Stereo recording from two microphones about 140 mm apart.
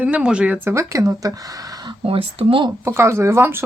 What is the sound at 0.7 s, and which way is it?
Speech, 20° right (ahead or behind).